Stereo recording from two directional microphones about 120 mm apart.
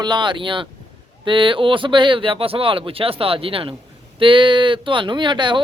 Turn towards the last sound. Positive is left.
turn(degrees=-40)  # may be behind; listen again after turning